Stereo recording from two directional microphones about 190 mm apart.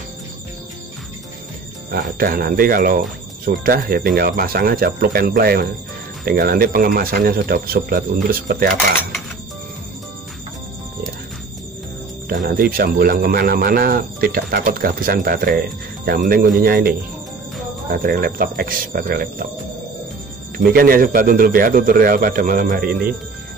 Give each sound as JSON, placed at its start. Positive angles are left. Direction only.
{"t": 1.9, "sound": "speech", "side_deg": -50}
{"t": 12.3, "sound": "speech", "side_deg": -50}
{"t": 20.5, "sound": "speech", "side_deg": -50}